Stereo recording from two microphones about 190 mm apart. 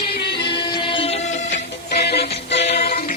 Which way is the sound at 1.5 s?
60° left (ahead or behind).